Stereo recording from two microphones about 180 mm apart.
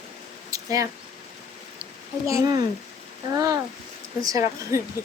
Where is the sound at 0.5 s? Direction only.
20° right (ahead or behind).